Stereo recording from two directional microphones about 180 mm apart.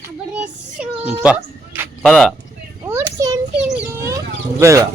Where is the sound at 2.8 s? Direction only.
15° right (ahead or behind).